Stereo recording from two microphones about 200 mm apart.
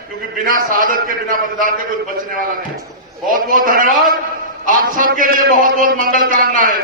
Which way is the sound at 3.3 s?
45° right (ahead or behind).